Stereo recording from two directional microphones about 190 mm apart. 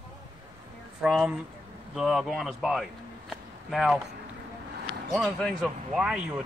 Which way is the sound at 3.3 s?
Centre (ahead or behind).